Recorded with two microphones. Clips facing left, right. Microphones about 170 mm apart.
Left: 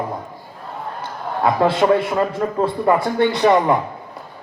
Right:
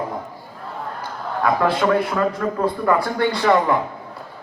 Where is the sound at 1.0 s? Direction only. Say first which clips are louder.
Left 3 dB; 25° left (ahead or behind).